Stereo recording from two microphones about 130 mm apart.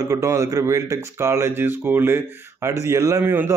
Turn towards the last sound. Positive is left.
turn(degrees=-20)  # may be behind; listen again after turning